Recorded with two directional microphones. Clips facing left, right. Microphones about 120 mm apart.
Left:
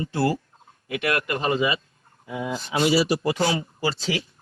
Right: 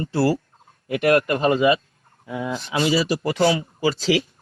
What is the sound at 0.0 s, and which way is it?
Speech, 35° right (ahead or behind).